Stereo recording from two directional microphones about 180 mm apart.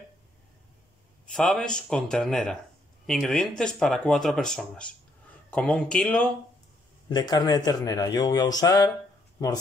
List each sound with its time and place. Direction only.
1.3 s speech: 5° left (ahead or behind)
7.1 s a man's voice: 25° left (ahead or behind)